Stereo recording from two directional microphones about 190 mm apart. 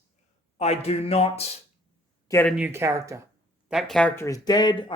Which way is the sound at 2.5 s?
10° right (ahead or behind).